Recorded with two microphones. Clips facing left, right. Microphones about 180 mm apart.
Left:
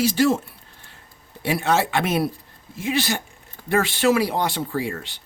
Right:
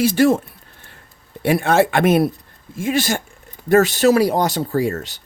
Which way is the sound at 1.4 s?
55° right (ahead or behind).